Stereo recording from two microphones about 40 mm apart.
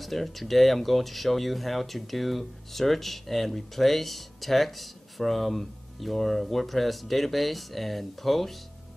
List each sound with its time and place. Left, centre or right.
0.0 s speech: centre